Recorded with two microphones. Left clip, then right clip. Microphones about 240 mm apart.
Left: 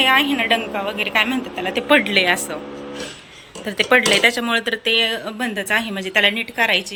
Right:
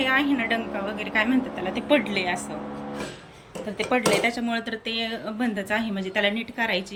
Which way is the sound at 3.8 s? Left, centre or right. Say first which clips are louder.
Left 8 dB; centre.